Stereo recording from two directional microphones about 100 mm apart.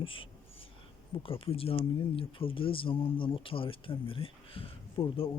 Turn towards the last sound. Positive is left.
turn(degrees=60)  # may be behind; listen again after turning